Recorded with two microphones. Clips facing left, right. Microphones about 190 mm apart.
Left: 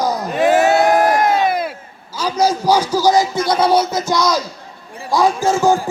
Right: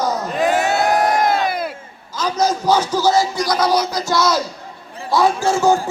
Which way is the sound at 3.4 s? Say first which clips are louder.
Left 3 dB; 30° left (ahead or behind).